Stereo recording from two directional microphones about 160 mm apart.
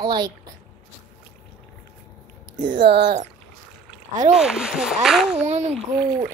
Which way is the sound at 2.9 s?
90° right.